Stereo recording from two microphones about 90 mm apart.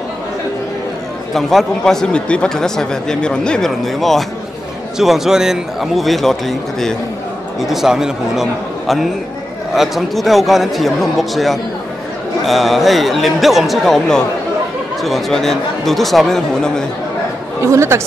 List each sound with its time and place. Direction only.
1.3 s a man's voice: centre (ahead or behind)
17.6 s speech: 30° right (ahead or behind)